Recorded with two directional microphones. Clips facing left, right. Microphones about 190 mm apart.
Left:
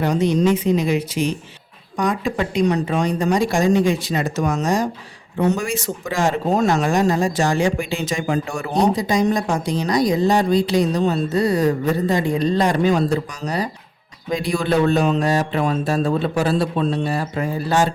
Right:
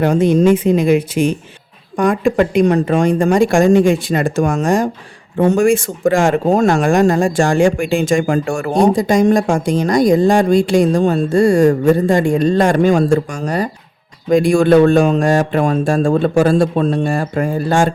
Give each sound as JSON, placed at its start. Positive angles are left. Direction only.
{"t": 0.0, "sound": "speech", "side_deg": -50}